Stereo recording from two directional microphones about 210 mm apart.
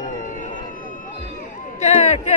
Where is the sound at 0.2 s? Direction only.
40° left (ahead or behind).